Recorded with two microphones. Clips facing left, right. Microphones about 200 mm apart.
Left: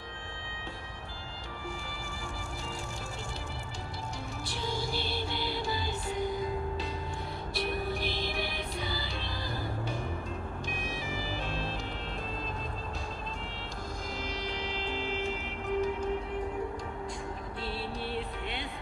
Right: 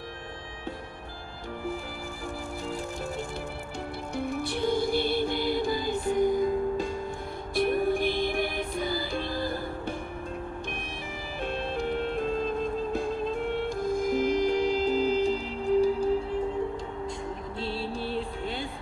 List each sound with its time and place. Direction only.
4.2 s music: 55° right (ahead or behind)
11.4 s music: 55° right (ahead or behind); by 16.3 s 30° right (ahead or behind)
17.6 s music: 30° right (ahead or behind)
18.1 s vehicle: 35° right (ahead or behind)